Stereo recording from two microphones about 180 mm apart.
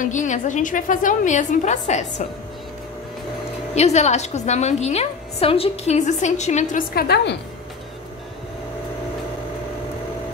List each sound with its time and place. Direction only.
0.0 s a woman's voice: 45° left (ahead or behind)
3.7 s a woman's voice: 40° left (ahead or behind)
7.0 s a woman's voice: 65° left (ahead or behind)